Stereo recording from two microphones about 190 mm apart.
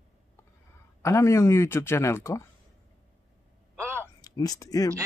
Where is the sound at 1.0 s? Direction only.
15° left (ahead or behind).